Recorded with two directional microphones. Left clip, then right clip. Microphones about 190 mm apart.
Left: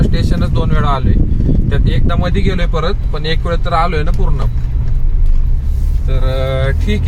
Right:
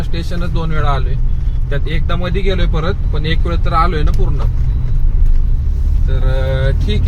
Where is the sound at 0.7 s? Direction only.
25° left (ahead or behind).